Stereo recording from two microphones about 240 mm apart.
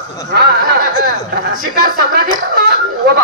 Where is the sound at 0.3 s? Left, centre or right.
Right.